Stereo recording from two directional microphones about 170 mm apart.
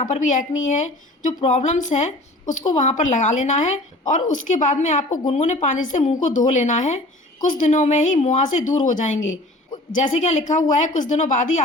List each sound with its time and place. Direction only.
0.0 s a woman's voice: 45° left (ahead or behind)